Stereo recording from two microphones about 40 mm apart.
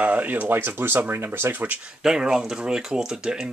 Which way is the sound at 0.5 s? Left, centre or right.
Right.